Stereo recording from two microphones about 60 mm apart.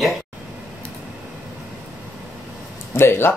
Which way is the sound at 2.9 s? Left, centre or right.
Left.